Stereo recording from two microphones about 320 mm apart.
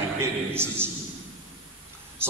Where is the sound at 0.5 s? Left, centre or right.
Centre.